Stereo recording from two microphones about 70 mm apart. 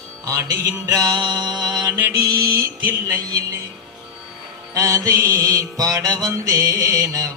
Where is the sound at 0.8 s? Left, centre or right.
Right.